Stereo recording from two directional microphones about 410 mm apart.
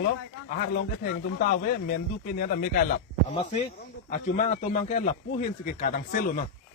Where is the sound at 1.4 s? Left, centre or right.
Centre.